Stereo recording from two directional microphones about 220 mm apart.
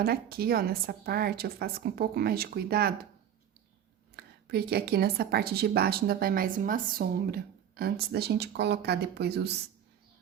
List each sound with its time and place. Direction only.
0.0 s a woman's voice: 45° right (ahead or behind)
4.1 s a woman's voice: 45° right (ahead or behind)